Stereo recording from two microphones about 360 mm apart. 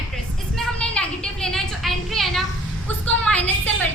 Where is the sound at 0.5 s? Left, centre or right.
Centre.